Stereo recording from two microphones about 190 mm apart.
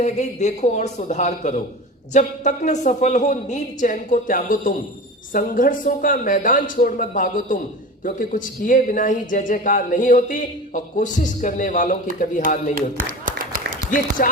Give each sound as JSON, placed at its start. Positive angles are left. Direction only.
{"t": 0.0, "sound": "a woman's voice", "side_deg": 35}
{"t": 12.7, "sound": "a sound", "side_deg": -45}
{"t": 14.2, "sound": "speech", "side_deg": 45}